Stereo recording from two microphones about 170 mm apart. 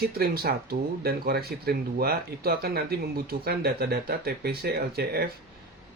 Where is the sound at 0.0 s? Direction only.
65° right (ahead or behind).